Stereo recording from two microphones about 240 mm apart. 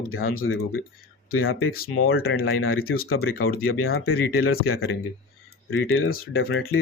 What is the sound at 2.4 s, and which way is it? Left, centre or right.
Speech, left.